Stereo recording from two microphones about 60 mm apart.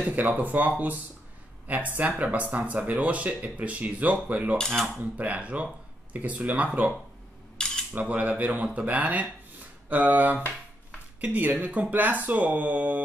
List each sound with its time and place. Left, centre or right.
0.0 s speech: right
2.0 s speech: right
4.6 s speech: centre
5.1 s speech: right
7.5 s cutlery: centre
7.9 s speech: right